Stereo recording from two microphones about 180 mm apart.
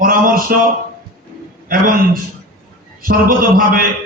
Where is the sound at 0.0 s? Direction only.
50° right (ahead or behind).